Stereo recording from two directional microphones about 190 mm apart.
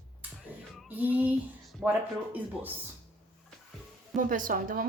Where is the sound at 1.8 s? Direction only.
10° right (ahead or behind).